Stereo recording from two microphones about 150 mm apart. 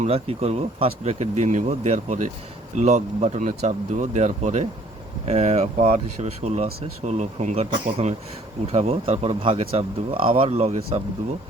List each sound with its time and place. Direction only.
0.0 s speech: 45° right (ahead or behind)